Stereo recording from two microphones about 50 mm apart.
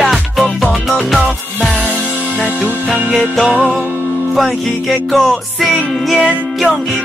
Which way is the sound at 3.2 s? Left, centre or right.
Centre.